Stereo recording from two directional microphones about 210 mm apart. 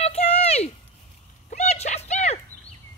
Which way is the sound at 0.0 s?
30° left (ahead or behind).